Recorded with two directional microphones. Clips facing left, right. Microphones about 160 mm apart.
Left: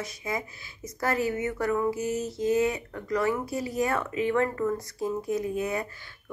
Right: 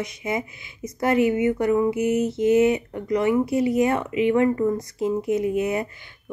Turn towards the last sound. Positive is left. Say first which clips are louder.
# right 6 dB
turn(degrees=-20)  # may be behind; listen again after turning